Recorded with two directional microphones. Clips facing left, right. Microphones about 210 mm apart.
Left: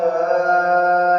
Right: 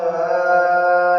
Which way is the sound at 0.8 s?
35° left (ahead or behind).